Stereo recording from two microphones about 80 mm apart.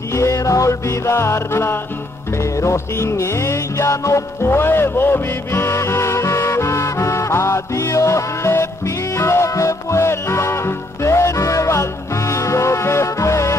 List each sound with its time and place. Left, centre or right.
0.1 s music: left